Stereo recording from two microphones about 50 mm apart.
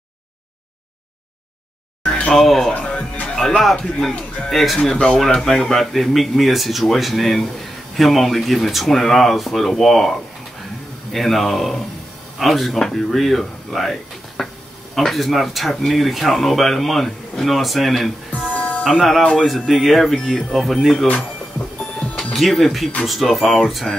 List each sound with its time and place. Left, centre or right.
2.0 s a sound: left
2.3 s speech: centre
2.7 s music: left
3.3 s speech: centre
4.7 s speech: centre
11.1 s speech: centre
14.4 s a sound: centre
15.0 s speech: centre
22.3 s speech: centre